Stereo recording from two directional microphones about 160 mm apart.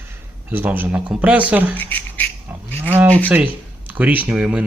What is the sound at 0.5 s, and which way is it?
Speech, 10° right (ahead or behind).